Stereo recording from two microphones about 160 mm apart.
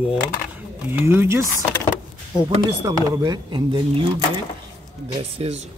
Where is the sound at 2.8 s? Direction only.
20° right (ahead or behind).